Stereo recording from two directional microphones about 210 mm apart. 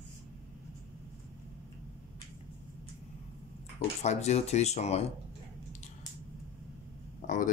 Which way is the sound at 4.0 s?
30° left (ahead or behind).